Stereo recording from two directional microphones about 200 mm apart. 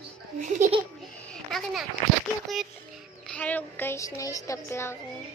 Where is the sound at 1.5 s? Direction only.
Centre (ahead or behind).